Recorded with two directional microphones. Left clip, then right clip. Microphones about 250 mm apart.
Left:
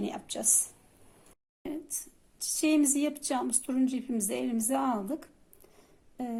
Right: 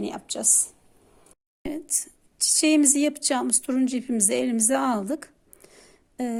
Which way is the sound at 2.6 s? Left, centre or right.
Right.